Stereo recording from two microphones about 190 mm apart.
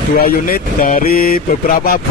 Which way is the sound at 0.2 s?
50° left (ahead or behind).